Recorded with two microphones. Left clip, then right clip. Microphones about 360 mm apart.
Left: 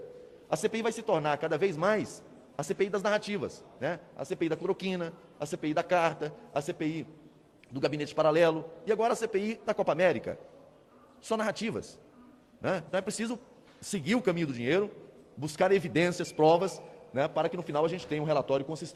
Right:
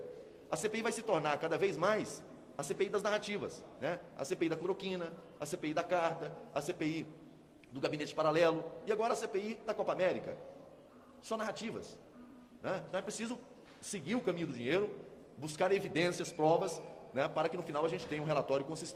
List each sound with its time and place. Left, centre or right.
0.5 s a man's voice: left
11.3 s a man's voice: left